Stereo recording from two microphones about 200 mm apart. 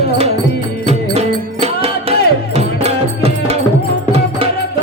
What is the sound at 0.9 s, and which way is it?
Music, 30° right (ahead or behind).